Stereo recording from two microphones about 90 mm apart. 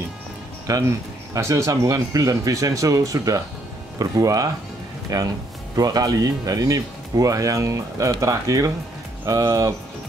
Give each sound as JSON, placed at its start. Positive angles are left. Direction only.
{"t": 0.7, "sound": "speech", "side_deg": -40}